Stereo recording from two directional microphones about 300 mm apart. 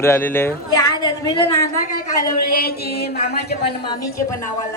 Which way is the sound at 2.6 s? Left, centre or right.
Left.